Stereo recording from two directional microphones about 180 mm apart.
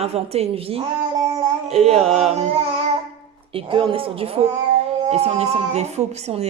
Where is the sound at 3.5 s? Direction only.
30° right (ahead or behind).